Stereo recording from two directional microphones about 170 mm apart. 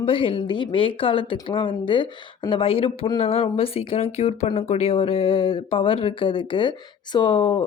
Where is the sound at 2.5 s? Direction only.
30° left (ahead or behind).